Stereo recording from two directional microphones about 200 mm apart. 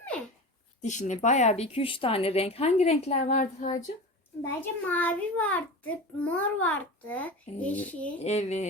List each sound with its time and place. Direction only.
0.8 s speech: 35° left (ahead or behind)
4.4 s a child's voice: 10° left (ahead or behind)
8.2 s speech: 35° left (ahead or behind)